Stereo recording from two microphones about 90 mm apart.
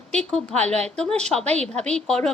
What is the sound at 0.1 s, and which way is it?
Speech, 5° left (ahead or behind).